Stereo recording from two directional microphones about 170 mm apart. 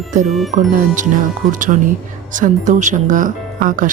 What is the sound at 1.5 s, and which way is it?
Speech, 50° right (ahead or behind).